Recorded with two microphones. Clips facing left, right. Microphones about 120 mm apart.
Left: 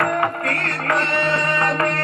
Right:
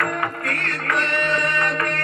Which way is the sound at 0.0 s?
30° left (ahead or behind).